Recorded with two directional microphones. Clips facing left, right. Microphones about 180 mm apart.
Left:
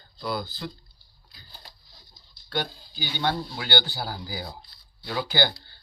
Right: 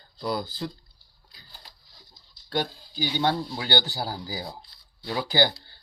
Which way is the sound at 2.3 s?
40° right (ahead or behind).